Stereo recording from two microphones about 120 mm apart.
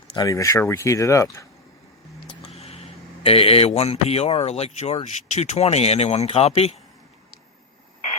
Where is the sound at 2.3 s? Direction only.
55° left (ahead or behind).